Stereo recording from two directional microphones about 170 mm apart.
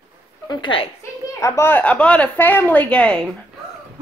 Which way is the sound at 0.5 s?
30° left (ahead or behind).